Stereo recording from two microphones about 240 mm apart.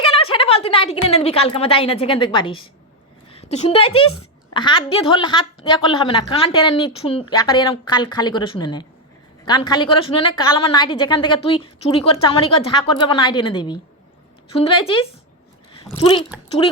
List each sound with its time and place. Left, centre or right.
0.0 s a woman's voice: left